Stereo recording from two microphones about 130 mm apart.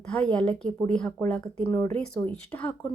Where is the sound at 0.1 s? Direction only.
10° left (ahead or behind).